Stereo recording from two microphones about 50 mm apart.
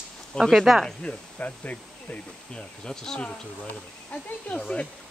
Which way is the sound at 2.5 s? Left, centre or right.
Centre.